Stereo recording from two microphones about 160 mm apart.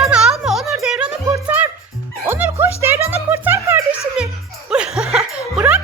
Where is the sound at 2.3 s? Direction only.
10° right (ahead or behind).